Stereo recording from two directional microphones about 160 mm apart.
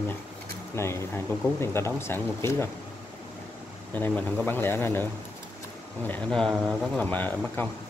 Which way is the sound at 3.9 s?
10° left (ahead or behind).